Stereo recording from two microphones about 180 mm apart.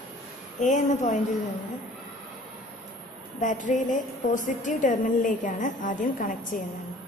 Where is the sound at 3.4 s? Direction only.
45° left (ahead or behind).